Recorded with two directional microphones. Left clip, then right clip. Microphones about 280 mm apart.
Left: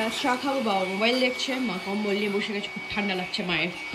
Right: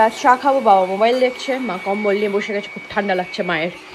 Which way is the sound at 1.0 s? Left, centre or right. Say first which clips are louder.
Right 8 dB; centre.